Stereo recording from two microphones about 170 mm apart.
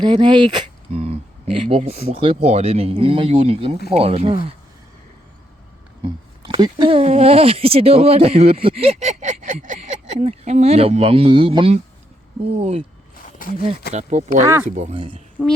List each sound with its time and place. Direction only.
0.0 s speech: 25° right (ahead or behind)
6.0 s speech: 25° right (ahead or behind)
13.2 s a sound: 55° left (ahead or behind)
13.9 s speech: 45° right (ahead or behind)
14.4 s speech: 15° right (ahead or behind)
14.8 s speech: 35° right (ahead or behind)
15.4 s speech: centre (ahead or behind)